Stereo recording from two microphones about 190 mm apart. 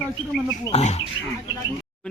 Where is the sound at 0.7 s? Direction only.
35° left (ahead or behind).